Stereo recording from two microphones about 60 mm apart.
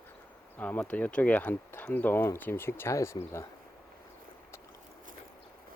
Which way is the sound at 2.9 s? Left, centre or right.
Left.